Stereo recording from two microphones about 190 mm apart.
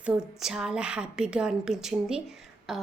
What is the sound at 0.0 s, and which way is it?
A woman's voice, 5° right (ahead or behind).